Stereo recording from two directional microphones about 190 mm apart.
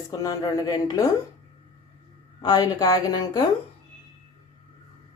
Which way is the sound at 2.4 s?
20° left (ahead or behind).